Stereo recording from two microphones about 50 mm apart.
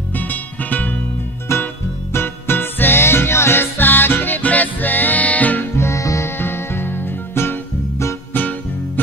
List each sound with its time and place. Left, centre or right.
0.1 s music: left
1.5 s music: left
2.1 s music: left
5.8 s music: left
6.3 s music: left